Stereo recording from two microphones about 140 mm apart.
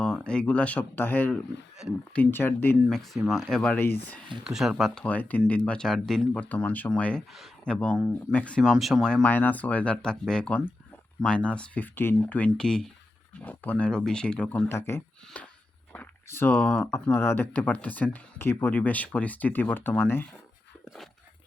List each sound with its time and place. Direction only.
0.0 s speech: 5° left (ahead or behind)
3.2 s speech: centre (ahead or behind)
4.4 s speech: 5° right (ahead or behind)
14.7 s speech: 15° left (ahead or behind)